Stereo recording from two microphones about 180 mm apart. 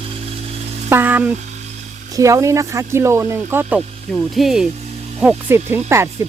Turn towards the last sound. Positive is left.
turn(degrees=-15)  # may be behind; listen again after turning